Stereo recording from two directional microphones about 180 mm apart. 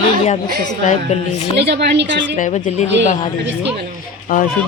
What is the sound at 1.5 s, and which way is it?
Speech, 70° right (ahead or behind).